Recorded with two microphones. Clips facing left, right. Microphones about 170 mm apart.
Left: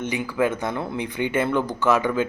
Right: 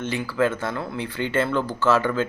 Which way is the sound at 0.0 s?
15° left (ahead or behind).